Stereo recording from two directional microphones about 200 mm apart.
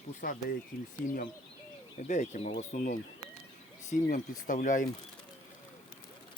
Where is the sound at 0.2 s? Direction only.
45° left (ahead or behind).